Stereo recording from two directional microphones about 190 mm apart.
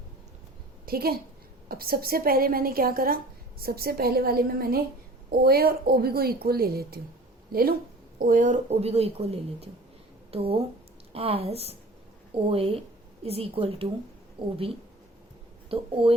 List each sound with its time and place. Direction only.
0.9 s a woman's voice: 50° right (ahead or behind)
8.2 s a woman's voice: 45° right (ahead or behind); by 14.5 s 25° right (ahead or behind)
15.7 s a woman's voice: 30° right (ahead or behind)